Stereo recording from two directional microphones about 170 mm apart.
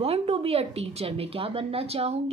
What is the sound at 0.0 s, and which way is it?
A woman's voice, 35° right (ahead or behind).